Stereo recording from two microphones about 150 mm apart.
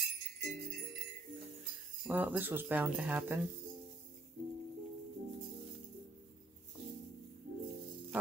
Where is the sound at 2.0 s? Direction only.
10° right (ahead or behind).